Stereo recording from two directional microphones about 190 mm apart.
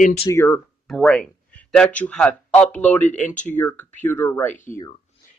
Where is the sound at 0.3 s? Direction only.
15° left (ahead or behind).